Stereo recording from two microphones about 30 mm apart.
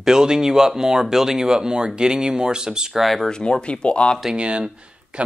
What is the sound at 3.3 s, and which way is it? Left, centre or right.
Speech, left.